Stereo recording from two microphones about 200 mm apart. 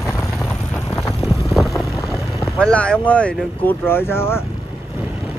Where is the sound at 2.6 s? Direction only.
5° left (ahead or behind).